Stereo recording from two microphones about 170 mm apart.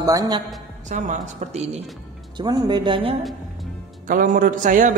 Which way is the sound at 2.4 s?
25° right (ahead or behind).